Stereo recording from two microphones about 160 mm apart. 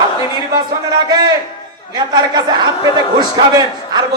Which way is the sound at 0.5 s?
25° right (ahead or behind).